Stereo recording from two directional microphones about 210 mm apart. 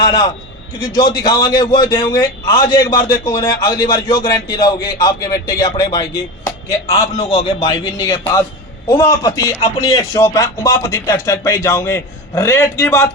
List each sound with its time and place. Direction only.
0.0 s a man's voice: 20° left (ahead or behind)
2.9 s speech: 40° left (ahead or behind)
3.2 s a man's voice: 20° left (ahead or behind)
7.0 s a man's voice: 25° left (ahead or behind)